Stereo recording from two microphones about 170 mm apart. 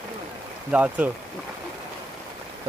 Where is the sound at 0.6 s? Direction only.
5° right (ahead or behind).